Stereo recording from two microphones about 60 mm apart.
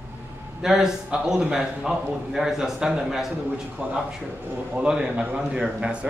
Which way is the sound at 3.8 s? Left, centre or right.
Centre.